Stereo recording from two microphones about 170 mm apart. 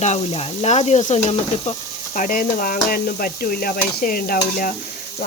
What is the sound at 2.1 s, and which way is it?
Speech, 50° left (ahead or behind).